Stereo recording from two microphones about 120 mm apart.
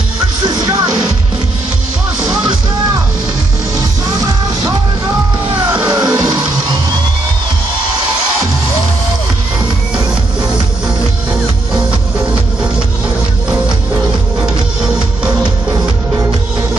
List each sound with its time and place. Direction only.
4.2 s music: 30° right (ahead or behind)
5.7 s music: 10° right (ahead or behind)
6.1 s music: 35° right (ahead or behind)
14.4 s music: 5° right (ahead or behind)